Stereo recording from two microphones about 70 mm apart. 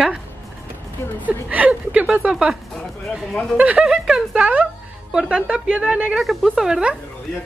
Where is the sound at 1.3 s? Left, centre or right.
Centre.